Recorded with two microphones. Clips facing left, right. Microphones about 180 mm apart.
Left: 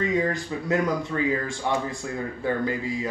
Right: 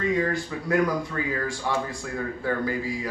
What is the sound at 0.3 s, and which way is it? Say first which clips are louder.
A man's voice: even; 20° left (ahead or behind).